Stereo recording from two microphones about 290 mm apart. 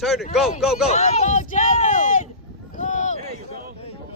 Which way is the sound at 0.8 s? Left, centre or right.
Left.